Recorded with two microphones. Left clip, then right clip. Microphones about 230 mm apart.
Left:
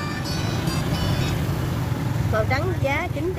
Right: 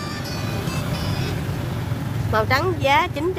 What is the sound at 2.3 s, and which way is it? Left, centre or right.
Speech, right.